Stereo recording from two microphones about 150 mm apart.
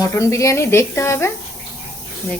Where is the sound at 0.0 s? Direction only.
20° left (ahead or behind).